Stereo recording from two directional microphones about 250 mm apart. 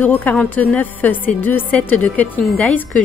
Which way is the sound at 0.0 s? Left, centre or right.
Centre.